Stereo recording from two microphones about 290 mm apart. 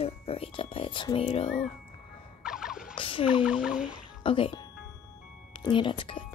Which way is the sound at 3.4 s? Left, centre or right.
Centre.